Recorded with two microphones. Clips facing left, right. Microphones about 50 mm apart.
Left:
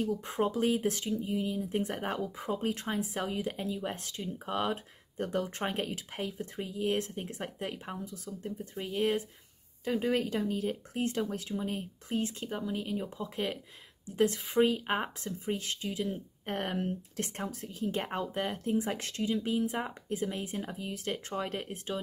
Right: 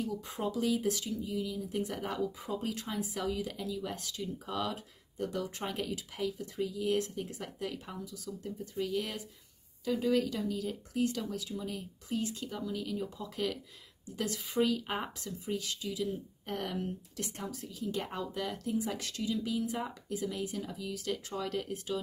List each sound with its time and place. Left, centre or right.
0.0 s speech: left